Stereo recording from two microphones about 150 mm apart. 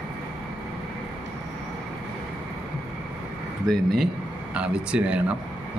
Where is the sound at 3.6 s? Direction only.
Centre (ahead or behind).